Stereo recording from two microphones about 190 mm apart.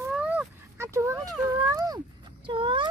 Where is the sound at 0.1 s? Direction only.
5° right (ahead or behind).